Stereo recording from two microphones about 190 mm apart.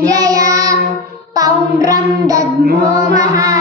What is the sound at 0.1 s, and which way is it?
Child singing, 20° right (ahead or behind).